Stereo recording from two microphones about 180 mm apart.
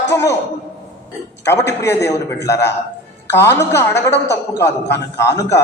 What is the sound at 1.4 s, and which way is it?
A man's voice, 15° left (ahead or behind).